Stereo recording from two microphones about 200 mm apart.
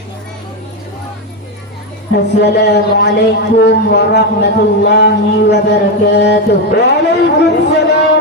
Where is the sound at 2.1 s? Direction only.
60° left (ahead or behind).